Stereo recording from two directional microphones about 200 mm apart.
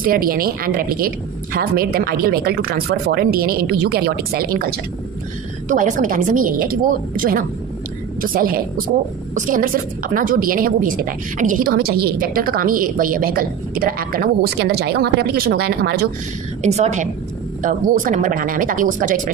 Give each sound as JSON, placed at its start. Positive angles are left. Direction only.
{"t": 0.0, "sound": "a woman's voice", "side_deg": -45}
{"t": 5.7, "sound": "a woman's voice", "side_deg": -40}
{"t": 16.6, "sound": "speech", "side_deg": -35}